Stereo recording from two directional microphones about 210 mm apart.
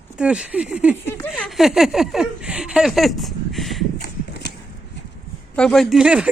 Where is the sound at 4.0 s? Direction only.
50° left (ahead or behind).